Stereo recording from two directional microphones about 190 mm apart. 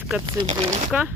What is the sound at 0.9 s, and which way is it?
Speech, 5° right (ahead or behind).